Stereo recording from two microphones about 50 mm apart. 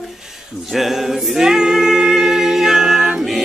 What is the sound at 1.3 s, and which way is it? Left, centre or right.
A capella, centre.